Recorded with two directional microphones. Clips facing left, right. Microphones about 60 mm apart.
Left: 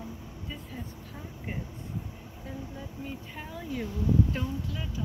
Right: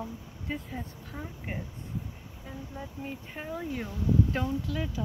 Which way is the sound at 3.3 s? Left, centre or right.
Right.